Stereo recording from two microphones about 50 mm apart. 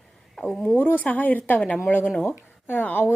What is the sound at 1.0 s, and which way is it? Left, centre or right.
Speech, left.